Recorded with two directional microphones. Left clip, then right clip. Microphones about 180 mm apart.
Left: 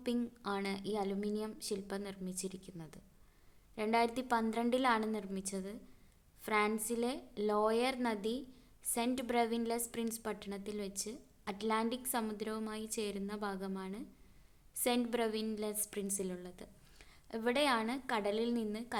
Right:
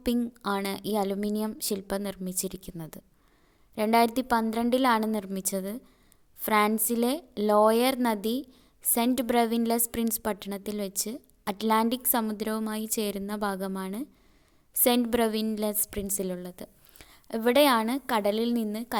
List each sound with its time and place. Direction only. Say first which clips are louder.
0.0 s a woman's voice: right 9 dB; 40° right (ahead or behind)